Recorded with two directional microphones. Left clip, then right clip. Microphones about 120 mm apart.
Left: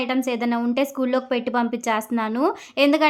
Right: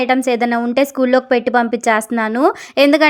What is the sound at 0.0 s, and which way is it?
A woman's voice, 45° right (ahead or behind).